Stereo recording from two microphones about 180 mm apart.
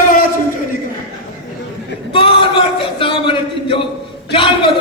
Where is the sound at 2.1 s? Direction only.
30° left (ahead or behind).